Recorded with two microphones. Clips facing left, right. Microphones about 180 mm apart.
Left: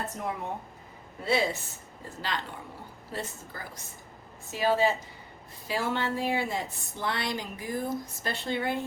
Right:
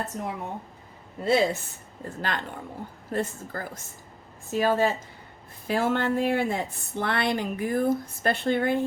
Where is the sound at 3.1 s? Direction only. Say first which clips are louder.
Right 8 dB; 50° right (ahead or behind).